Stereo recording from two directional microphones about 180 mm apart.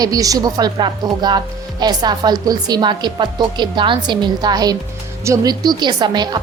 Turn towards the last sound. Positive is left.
turn(degrees=-25)  # may be behind; listen again after turning